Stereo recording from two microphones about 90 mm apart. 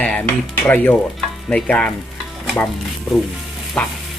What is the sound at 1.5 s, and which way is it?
Speech, 10° left (ahead or behind).